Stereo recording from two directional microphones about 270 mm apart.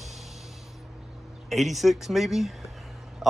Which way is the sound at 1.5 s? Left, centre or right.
Centre.